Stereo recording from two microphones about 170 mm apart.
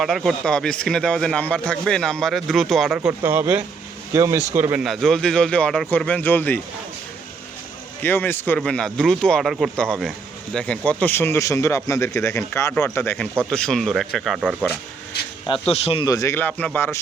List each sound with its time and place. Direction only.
0.0 s speech: centre (ahead or behind)
3.1 s speech: 15° right (ahead or behind)
4.8 s speech: centre (ahead or behind)
8.0 s speech: 10° left (ahead or behind)
15.7 s speech: 35° left (ahead or behind)
16.0 s speech: 20° left (ahead or behind)